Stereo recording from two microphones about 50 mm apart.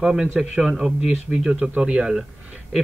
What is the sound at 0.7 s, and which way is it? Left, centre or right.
A man's voice, right.